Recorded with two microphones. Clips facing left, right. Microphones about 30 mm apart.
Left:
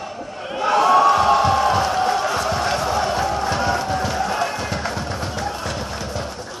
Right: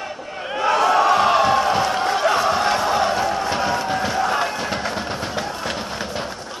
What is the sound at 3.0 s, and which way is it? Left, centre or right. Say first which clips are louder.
Music: even; centre.